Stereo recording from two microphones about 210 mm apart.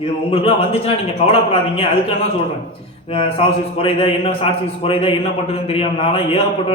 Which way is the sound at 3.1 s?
25° left (ahead or behind).